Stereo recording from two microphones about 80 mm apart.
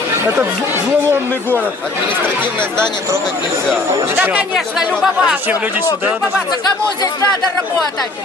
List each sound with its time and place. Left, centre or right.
2.0 s speech: right
4.2 s speech: centre